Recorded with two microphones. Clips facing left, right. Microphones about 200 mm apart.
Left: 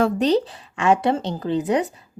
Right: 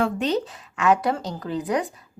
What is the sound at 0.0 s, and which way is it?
Speech, 35° left (ahead or behind).